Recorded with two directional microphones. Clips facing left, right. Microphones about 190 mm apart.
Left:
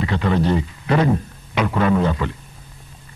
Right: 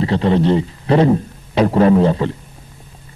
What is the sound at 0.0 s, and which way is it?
Speech, 30° right (ahead or behind).